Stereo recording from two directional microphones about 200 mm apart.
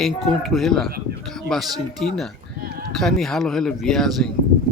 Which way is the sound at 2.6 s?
50° right (ahead or behind).